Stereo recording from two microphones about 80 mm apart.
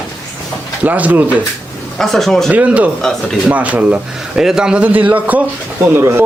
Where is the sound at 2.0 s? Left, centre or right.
Centre.